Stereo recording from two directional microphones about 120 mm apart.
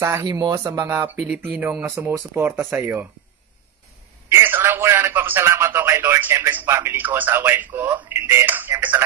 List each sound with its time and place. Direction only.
0.2 s speech: 35° right (ahead or behind)
1.1 s speech: 5° right (ahead or behind)
4.3 s speech: 20° right (ahead or behind)